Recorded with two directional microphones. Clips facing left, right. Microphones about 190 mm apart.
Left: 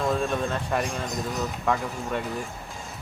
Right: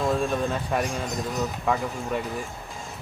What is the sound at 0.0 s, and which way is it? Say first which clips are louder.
Speech: right 1 dB; 5° right (ahead or behind).